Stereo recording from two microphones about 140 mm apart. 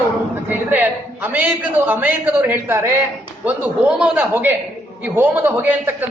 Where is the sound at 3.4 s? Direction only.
5° right (ahead or behind).